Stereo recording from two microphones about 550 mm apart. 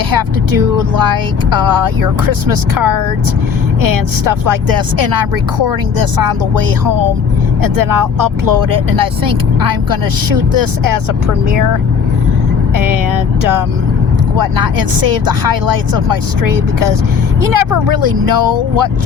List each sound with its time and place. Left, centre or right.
0.1 s speech: right
14.3 s speech: right